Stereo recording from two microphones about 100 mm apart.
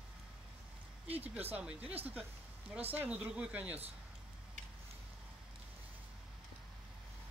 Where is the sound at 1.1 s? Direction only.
15° right (ahead or behind).